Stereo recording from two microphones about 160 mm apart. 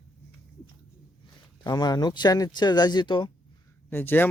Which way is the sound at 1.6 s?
25° left (ahead or behind).